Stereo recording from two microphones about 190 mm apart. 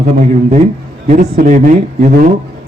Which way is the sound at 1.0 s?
40° right (ahead or behind).